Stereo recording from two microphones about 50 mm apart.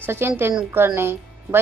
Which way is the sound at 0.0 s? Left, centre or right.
Right.